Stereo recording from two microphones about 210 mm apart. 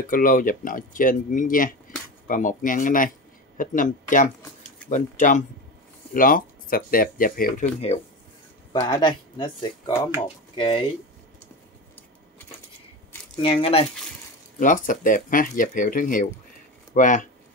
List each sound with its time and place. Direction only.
0.1 s speech: 40° left (ahead or behind)
8.7 s speech: 20° left (ahead or behind)
13.4 s speech: 25° left (ahead or behind)
14.6 s speech: 40° left (ahead or behind)